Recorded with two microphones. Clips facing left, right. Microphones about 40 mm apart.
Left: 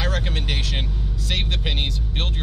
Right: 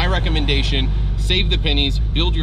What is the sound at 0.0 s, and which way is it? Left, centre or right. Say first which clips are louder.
Vehicle: right 6 dB; right.